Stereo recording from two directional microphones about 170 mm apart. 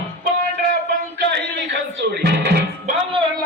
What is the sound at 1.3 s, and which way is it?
Music, 90° right.